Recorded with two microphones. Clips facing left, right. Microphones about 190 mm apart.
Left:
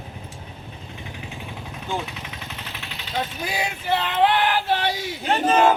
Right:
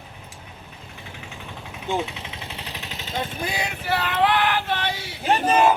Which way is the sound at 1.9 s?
25° right (ahead or behind).